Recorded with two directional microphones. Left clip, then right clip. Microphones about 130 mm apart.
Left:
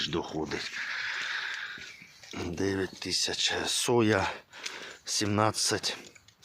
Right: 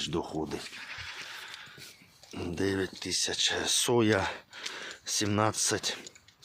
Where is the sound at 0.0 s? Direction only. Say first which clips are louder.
Left 1 dB; 15° right (ahead or behind).